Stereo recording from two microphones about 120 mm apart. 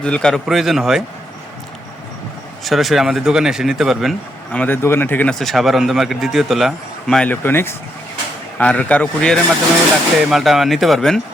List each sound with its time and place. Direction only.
0.0 s speech: 10° left (ahead or behind)
2.6 s speech: centre (ahead or behind)
4.5 s speech: 15° left (ahead or behind)
5.3 s speech: centre (ahead or behind)
7.3 s speech: 20° left (ahead or behind)
10.2 s speech: centre (ahead or behind)